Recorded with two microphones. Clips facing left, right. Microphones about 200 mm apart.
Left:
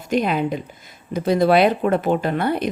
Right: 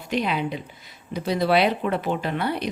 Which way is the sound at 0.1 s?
45° left (ahead or behind).